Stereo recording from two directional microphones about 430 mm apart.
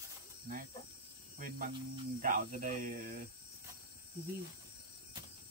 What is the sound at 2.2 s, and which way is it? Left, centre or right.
Speech, centre.